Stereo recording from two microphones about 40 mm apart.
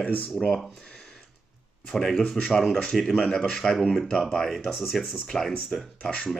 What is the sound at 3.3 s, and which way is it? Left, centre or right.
Mantra, centre.